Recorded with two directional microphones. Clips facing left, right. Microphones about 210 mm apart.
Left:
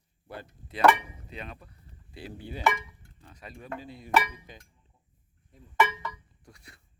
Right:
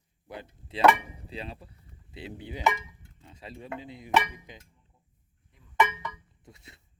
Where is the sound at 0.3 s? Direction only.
20° right (ahead or behind).